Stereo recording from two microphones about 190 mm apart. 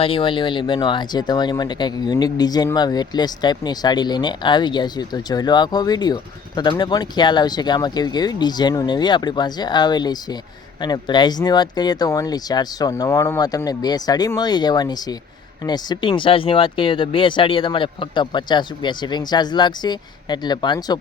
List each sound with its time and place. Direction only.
0.0 s speech: 25° left (ahead or behind)